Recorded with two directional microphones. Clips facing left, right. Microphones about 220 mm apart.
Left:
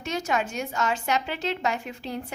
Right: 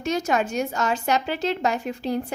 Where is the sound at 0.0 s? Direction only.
40° right (ahead or behind).